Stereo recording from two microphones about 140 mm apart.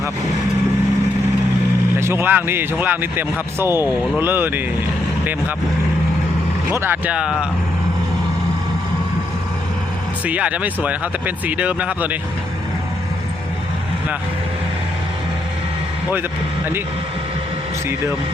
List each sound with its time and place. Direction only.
2.0 s a man's voice: 15° right (ahead or behind)
6.7 s a man's voice: 15° right (ahead or behind)
10.2 s a man's voice: 10° right (ahead or behind)